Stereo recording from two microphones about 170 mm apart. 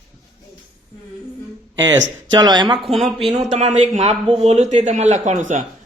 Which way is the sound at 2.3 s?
25° right (ahead or behind).